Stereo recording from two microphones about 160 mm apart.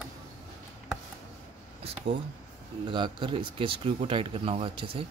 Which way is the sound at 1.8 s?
35° right (ahead or behind).